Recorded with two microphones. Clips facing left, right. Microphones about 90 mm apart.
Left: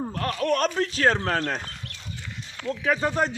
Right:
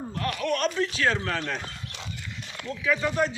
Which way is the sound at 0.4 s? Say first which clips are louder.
Left 3 dB; 40° left (ahead or behind).